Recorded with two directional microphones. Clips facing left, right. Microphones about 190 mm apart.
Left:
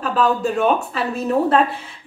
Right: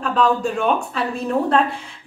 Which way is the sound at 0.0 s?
5° left (ahead or behind).